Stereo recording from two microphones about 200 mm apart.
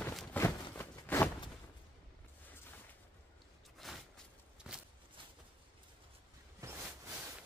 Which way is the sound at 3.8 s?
Centre (ahead or behind).